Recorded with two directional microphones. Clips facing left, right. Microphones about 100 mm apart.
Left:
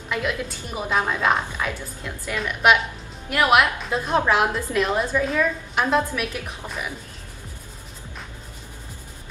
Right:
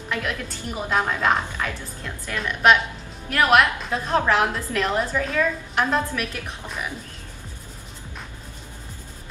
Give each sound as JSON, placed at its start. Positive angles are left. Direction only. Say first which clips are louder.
{"t": 0.1, "sound": "a woman's voice", "louder": "left 2 dB", "side_deg": 5}